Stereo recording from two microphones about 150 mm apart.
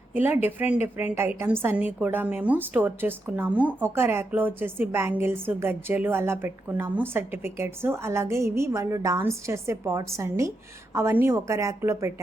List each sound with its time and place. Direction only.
0.1 s a woman's voice: 15° right (ahead or behind)